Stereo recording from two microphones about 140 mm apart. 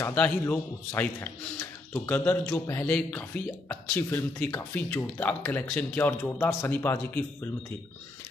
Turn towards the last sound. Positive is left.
turn(degrees=15)  # may be behind; listen again after turning